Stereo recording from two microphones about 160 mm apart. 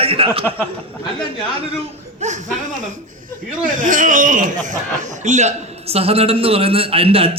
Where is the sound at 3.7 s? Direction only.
55° right (ahead or behind); by 7.3 s 35° right (ahead or behind).